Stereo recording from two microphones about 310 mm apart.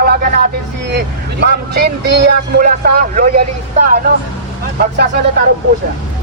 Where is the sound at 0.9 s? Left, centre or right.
Right.